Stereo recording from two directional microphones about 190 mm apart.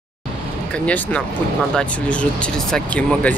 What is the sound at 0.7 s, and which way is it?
Speech, 5° left (ahead or behind).